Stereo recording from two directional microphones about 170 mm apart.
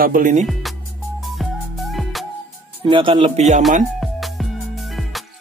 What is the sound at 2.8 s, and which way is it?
Speech, 30° right (ahead or behind).